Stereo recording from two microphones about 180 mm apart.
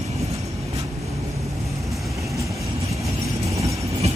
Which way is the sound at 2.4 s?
15° right (ahead or behind).